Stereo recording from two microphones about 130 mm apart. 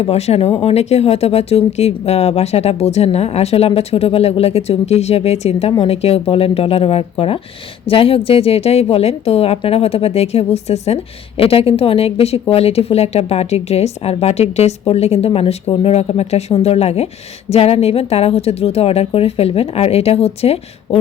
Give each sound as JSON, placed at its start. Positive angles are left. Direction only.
{"t": 0.0, "sound": "a woman's voice", "side_deg": 55}